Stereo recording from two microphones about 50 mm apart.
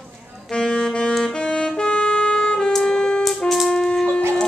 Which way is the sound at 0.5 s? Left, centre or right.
Centre.